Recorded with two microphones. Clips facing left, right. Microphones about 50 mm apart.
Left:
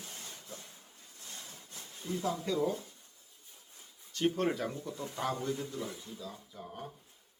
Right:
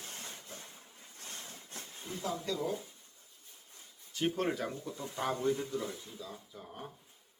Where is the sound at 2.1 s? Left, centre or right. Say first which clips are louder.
Left 7 dB; right.